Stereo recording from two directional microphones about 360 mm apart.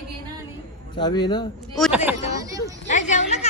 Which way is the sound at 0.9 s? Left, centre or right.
Centre.